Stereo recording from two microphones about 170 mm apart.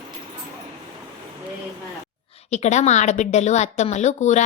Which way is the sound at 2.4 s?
40° left (ahead or behind).